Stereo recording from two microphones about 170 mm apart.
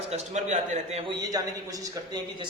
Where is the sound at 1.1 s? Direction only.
20° right (ahead or behind).